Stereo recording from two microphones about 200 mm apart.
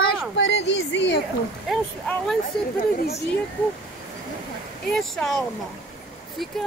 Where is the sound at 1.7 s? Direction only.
Centre (ahead or behind).